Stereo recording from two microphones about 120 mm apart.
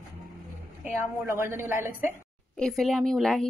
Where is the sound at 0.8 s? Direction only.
15° right (ahead or behind).